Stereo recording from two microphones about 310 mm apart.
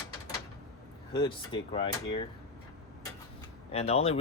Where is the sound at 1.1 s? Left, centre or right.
Centre.